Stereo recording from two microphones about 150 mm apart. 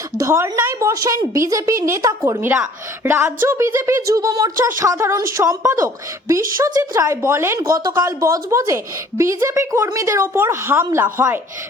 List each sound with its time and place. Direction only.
0.2 s a woman's voice: 20° right (ahead or behind)